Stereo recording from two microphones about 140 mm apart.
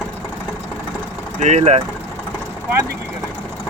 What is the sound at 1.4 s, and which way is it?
Speech, 55° right (ahead or behind).